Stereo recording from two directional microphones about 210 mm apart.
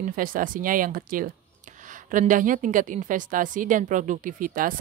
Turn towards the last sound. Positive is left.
turn(degrees=-40)  # may be behind; listen again after turning